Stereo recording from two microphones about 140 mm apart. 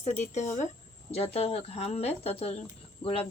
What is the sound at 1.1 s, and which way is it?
A woman's voice, 45° left (ahead or behind).